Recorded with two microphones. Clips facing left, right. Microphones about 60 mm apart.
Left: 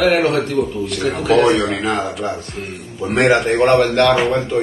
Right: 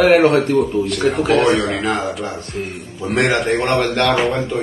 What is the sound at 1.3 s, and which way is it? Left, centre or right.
Speech, centre.